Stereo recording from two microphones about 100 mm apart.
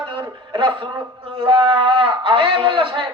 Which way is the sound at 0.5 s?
55° right (ahead or behind).